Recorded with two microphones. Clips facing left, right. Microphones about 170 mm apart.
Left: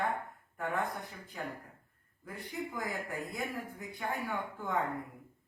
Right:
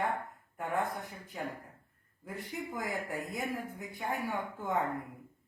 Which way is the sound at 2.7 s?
20° right (ahead or behind).